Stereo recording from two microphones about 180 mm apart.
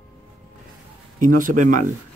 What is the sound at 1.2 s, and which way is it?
Speech, 45° right (ahead or behind).